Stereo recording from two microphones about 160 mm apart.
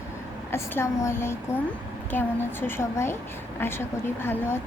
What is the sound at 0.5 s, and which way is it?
Speech, 15° left (ahead or behind).